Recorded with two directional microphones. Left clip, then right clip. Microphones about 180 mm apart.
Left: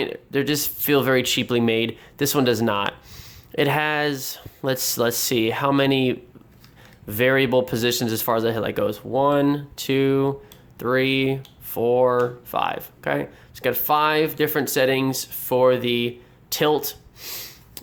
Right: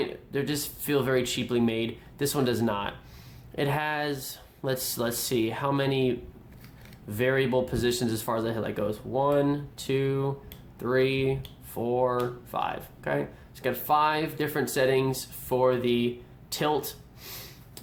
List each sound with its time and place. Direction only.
0.0 s speech: 40° left (ahead or behind)